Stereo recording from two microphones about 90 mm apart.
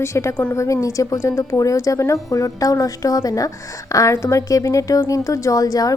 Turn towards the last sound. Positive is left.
turn(degrees=40)  # may be behind; listen again after turning